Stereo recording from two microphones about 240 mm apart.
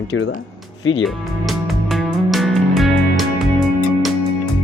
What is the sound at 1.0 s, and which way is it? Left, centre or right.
Music, centre.